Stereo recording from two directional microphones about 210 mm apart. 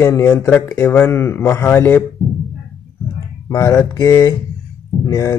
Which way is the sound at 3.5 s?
15° left (ahead or behind).